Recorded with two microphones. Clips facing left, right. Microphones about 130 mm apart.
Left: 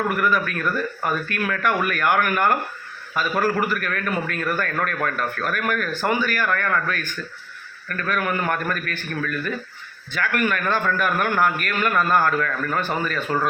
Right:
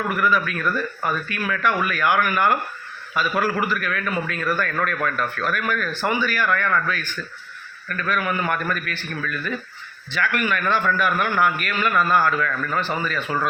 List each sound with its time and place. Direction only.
0.2 s a man's voice: 45° left (ahead or behind)